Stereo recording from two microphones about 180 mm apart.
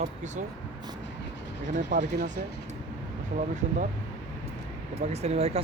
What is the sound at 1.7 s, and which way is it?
Speech, 45° right (ahead or behind).